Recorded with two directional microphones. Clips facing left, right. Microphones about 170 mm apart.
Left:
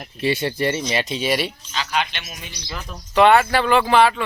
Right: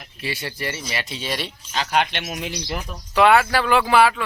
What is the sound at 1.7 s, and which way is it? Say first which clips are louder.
Speech: right 5 dB; 50° right (ahead or behind).